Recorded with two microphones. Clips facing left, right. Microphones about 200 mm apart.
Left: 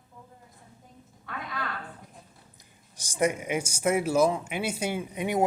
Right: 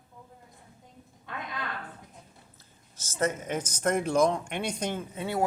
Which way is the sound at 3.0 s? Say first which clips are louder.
Left 3 dB; 15° left (ahead or behind).